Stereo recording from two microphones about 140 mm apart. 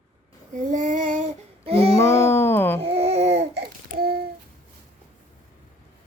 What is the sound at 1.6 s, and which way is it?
Music, 45° right (ahead or behind).